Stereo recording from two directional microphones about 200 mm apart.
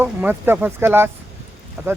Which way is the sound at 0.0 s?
10° right (ahead or behind).